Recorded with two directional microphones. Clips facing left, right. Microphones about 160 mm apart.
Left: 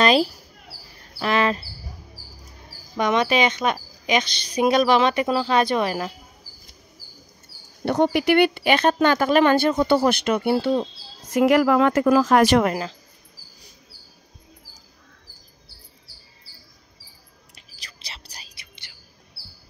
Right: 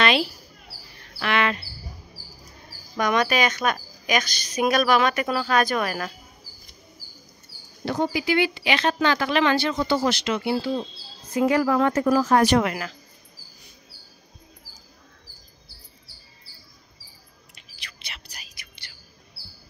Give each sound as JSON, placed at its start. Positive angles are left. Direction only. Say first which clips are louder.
{"t": 0.0, "sound": "a sound", "louder": "left 4 dB", "side_deg": 40}
{"t": 3.0, "sound": "speech", "louder": "left 2 dB", "side_deg": 25}
{"t": 7.8, "sound": "speech", "louder": "left 5 dB", "side_deg": 70}
{"t": 11.3, "sound": "speech", "louder": "left 4 dB", "side_deg": 90}
{"t": 17.6, "sound": "whispering", "louder": "right 1 dB", "side_deg": 35}